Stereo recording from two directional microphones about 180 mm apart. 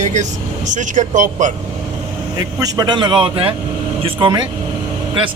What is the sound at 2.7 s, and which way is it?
Speech, 25° right (ahead or behind).